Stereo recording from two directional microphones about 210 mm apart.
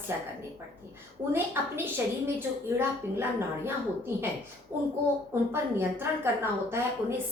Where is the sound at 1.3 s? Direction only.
10° right (ahead or behind).